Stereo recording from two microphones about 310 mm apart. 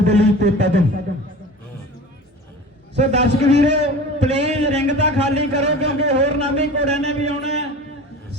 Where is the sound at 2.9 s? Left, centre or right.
Right.